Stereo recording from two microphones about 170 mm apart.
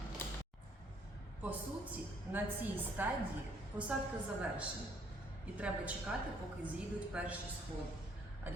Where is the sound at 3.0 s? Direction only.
10° right (ahead or behind).